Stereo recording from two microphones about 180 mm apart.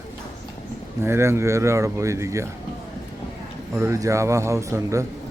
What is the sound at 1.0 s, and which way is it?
Speech, 15° right (ahead or behind).